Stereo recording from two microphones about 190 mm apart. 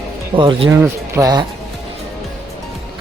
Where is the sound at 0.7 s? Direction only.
15° right (ahead or behind).